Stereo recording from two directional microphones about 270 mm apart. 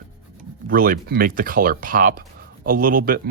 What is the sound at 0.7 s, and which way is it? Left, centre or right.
Speech, right.